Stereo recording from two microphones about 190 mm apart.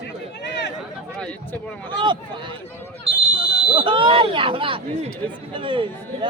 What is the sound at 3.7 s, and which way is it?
Speech, 25° right (ahead or behind).